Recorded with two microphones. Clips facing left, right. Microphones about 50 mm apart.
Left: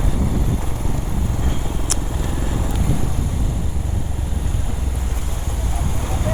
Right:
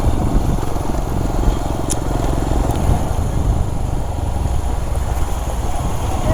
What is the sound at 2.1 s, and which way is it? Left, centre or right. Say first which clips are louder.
Vehicle: right 6 dB; right.